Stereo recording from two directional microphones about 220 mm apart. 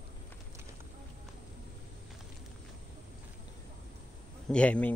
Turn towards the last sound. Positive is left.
turn(degrees=5)  # may be behind; listen again after turning